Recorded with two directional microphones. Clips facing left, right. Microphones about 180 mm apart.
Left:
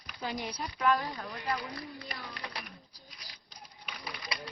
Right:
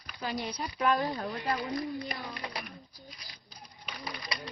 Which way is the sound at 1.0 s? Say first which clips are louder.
Right 6 dB; 35° right (ahead or behind).